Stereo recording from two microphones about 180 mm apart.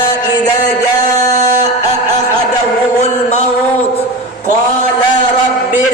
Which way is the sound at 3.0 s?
40° left (ahead or behind).